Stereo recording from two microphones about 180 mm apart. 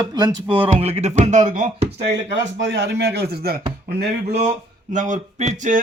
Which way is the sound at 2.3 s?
75° right (ahead or behind).